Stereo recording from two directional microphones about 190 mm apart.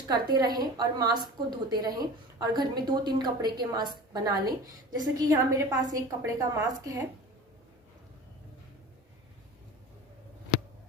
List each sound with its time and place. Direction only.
0.1 s a woman's voice: 20° right (ahead or behind)